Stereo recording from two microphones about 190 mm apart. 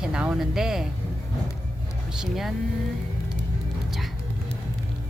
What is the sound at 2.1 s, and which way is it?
Speech, centre (ahead or behind).